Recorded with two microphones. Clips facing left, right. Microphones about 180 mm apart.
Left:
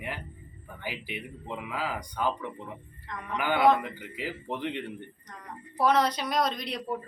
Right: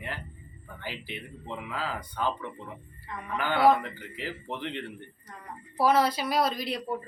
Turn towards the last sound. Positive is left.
turn(degrees=-5)  # may be behind; listen again after turning